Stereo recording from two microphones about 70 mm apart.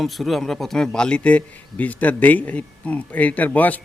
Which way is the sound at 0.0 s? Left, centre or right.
Centre.